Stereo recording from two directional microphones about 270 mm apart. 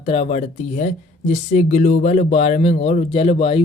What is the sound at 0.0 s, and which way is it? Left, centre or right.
A woman's voice, left.